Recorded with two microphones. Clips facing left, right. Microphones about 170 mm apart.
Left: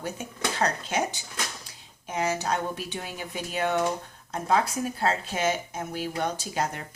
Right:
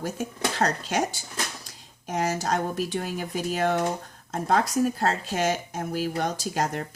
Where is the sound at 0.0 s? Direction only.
40° right (ahead or behind).